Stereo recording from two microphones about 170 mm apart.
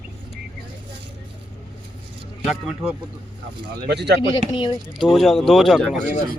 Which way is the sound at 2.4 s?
Centre (ahead or behind).